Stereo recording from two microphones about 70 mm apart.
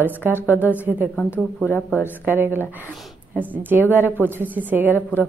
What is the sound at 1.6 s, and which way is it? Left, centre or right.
Speech, left.